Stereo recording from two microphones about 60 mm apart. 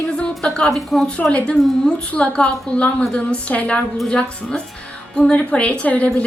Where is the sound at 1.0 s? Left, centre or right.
Centre.